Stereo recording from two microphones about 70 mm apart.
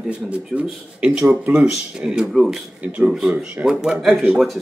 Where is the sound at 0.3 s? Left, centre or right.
Centre.